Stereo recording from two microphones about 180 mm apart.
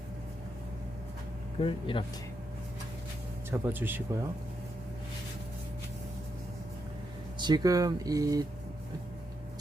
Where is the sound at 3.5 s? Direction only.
10° right (ahead or behind).